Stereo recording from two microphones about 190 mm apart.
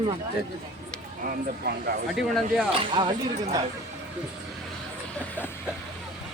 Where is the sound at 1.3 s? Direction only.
55° right (ahead or behind).